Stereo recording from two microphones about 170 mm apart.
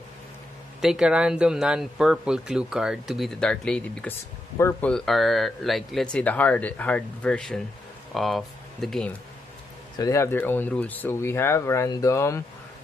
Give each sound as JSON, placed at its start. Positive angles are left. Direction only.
{"t": 0.7, "sound": "speech", "side_deg": -5}
{"t": 4.9, "sound": "speech", "side_deg": 0}
{"t": 9.9, "sound": "speech", "side_deg": 20}